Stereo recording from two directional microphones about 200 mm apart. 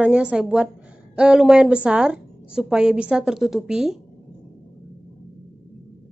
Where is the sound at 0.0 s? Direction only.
5° right (ahead or behind).